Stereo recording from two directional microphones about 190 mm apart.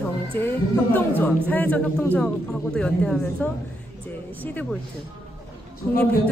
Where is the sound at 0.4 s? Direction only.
10° left (ahead or behind).